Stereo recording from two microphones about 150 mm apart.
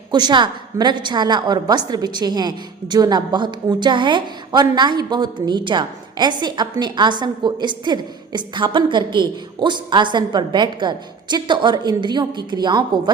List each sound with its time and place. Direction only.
0.1 s a woman's voice: 30° right (ahead or behind)